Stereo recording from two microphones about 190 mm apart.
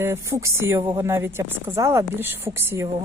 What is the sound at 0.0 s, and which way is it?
A woman's voice, 15° right (ahead or behind).